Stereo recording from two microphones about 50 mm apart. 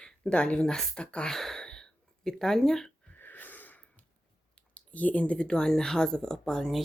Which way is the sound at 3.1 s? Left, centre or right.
Left.